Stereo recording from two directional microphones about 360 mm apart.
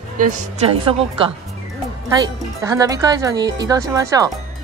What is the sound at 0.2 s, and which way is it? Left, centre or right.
Speech, right.